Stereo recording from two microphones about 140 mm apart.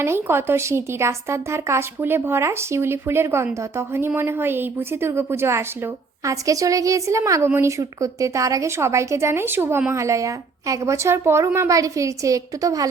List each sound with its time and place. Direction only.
0.0 s speech: 15° right (ahead or behind)